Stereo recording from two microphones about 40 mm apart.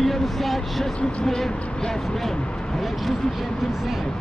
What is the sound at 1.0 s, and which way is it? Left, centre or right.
Speech, left.